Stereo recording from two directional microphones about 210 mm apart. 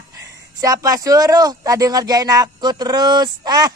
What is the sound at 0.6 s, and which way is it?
Speech, 15° right (ahead or behind).